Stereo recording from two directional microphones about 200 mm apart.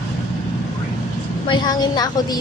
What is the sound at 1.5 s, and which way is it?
Speech, 20° left (ahead or behind).